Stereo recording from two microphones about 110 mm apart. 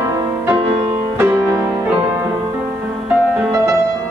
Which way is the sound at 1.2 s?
20° right (ahead or behind).